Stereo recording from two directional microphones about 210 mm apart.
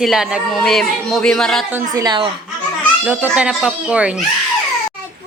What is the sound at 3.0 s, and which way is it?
Speech, 10° right (ahead or behind).